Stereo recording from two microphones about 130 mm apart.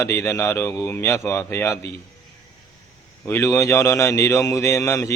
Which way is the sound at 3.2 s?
20° left (ahead or behind).